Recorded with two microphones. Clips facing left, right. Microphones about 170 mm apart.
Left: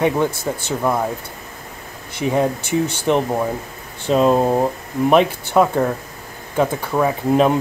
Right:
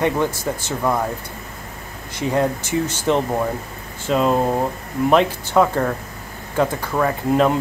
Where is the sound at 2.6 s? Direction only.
60° left (ahead or behind).